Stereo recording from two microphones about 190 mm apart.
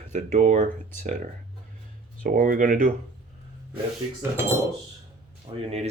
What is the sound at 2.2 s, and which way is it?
Speech, 45° right (ahead or behind).